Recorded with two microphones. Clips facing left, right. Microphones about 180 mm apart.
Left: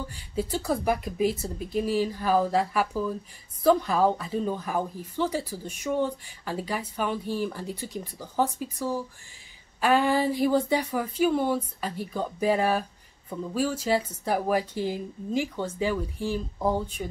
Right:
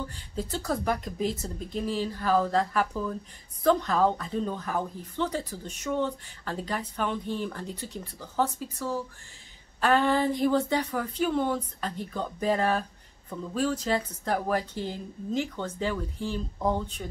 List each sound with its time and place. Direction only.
0.1 s a woman's voice: 10° left (ahead or behind)